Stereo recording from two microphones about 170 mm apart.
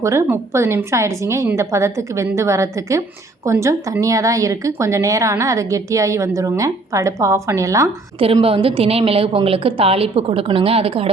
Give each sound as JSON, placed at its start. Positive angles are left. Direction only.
{"t": 0.0, "sound": "a woman's voice", "side_deg": -15}
{"t": 8.2, "sound": "a woman's voice", "side_deg": -35}